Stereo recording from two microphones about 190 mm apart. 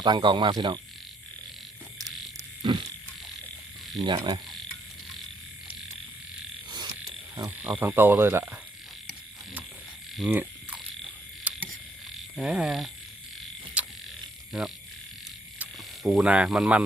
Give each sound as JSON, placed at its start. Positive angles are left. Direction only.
{"t": 0.0, "sound": "speech", "side_deg": -25}
{"t": 2.6, "sound": "a sound", "side_deg": -25}
{"t": 4.0, "sound": "speech", "side_deg": -25}
{"t": 6.7, "sound": "frog", "side_deg": -20}
{"t": 7.3, "sound": "insect", "side_deg": -20}
{"t": 7.7, "sound": "speech", "side_deg": -10}
{"t": 10.2, "sound": "insect", "side_deg": -5}
{"t": 11.5, "sound": "camera", "side_deg": -5}
{"t": 12.4, "sound": "speech", "side_deg": -5}
{"t": 13.8, "sound": "mechanisms", "side_deg": -5}
{"t": 14.5, "sound": "speech", "side_deg": 0}
{"t": 16.0, "sound": "speech", "side_deg": -5}